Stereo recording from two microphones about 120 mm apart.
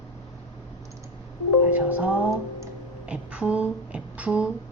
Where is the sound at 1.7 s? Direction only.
10° right (ahead or behind).